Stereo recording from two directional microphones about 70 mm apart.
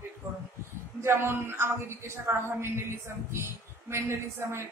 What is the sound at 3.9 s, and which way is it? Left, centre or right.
Speech, right.